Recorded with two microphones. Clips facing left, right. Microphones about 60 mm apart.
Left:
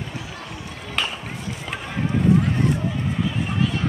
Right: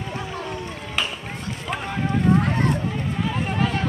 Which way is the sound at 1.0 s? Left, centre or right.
Centre.